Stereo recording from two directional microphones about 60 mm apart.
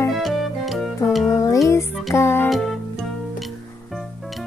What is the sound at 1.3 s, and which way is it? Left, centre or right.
Music, left.